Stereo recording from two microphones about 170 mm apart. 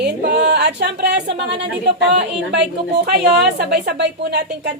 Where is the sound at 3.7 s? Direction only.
75° right (ahead or behind).